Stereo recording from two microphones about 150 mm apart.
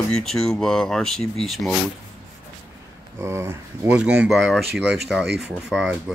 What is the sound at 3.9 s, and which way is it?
Speech, 5° right (ahead or behind).